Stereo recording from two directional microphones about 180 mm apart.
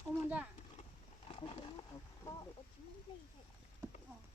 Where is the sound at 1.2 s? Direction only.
30° left (ahead or behind).